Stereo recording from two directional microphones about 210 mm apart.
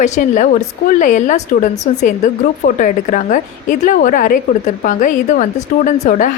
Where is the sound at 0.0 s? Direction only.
35° left (ahead or behind).